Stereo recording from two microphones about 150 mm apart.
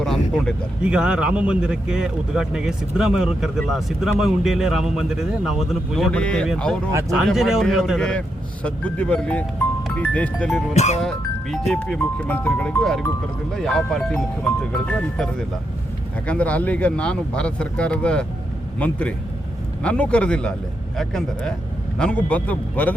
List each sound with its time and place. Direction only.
0.0 s speech: 5° left (ahead or behind)
10.8 s speech: 50° left (ahead or behind)
11.0 s speech: 5° left (ahead or behind)